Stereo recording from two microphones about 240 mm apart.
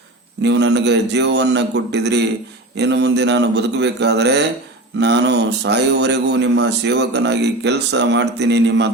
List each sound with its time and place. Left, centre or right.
0.4 s a man's voice: right